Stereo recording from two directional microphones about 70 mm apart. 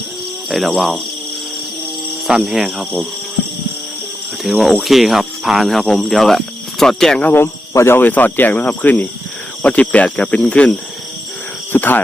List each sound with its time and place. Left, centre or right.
0.8 s speech: centre
2.2 s speech: centre
4.4 s speech: centre
7.3 s speech: left
7.9 s speech: left
11.7 s speech: left